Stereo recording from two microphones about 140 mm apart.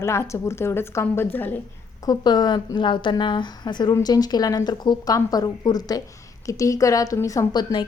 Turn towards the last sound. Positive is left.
turn(degrees=25)  # may be behind; listen again after turning